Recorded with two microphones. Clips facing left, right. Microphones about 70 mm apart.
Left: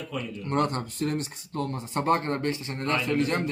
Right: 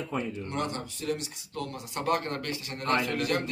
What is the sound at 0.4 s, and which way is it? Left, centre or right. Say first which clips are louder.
A man's voice: left 6 dB; left.